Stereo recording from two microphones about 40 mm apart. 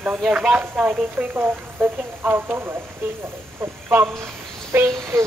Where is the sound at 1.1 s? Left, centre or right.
Right.